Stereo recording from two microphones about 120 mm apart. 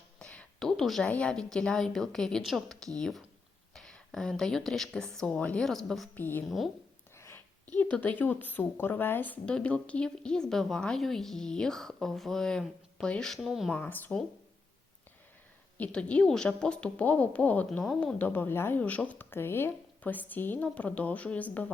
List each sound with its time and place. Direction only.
0.2 s a sound: 5° left (ahead or behind)
1.1 s speech: 5° left (ahead or behind)
6.1 s a woman's voice: 15° left (ahead or behind)
7.2 s a sound: 20° left (ahead or behind)
7.8 s a woman's voice: 15° left (ahead or behind)
13.7 s a woman's voice: 15° left (ahead or behind)
15.8 s a woman's voice: 10° left (ahead or behind)